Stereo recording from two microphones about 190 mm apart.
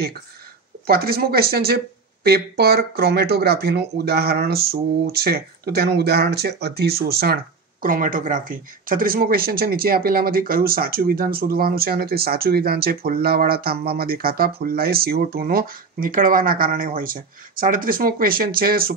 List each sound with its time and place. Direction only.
0.8 s speech: 55° right (ahead or behind)